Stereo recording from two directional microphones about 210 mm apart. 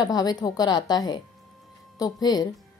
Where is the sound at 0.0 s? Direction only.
20° left (ahead or behind).